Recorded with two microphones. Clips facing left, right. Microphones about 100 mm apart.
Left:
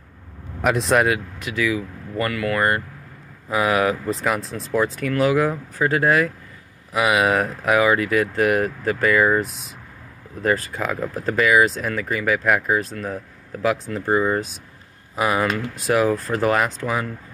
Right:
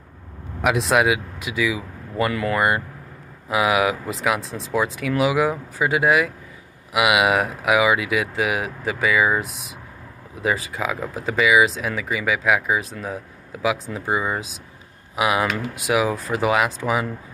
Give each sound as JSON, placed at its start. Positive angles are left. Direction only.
{"t": 0.6, "sound": "speech", "side_deg": 0}
{"t": 2.3, "sound": "speech", "side_deg": -25}
{"t": 3.4, "sound": "speech", "side_deg": -10}